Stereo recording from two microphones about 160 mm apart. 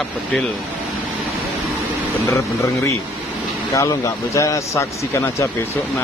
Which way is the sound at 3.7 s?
20° left (ahead or behind).